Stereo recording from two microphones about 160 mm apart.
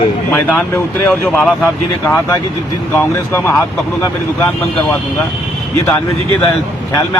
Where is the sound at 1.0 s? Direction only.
5° left (ahead or behind).